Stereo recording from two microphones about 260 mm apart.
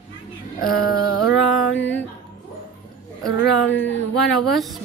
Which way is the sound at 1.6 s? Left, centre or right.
Centre.